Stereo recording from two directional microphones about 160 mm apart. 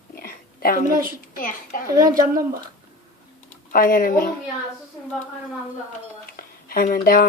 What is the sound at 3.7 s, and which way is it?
Speech, 60° left (ahead or behind).